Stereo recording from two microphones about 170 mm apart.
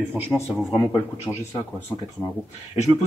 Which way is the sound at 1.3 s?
10° left (ahead or behind).